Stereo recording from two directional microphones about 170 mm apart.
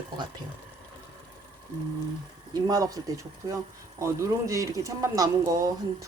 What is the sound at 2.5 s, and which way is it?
Speech, 20° right (ahead or behind).